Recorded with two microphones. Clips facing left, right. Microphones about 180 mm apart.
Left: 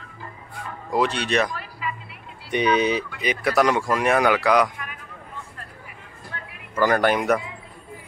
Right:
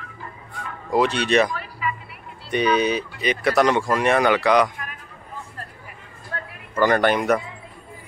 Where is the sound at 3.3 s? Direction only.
5° left (ahead or behind).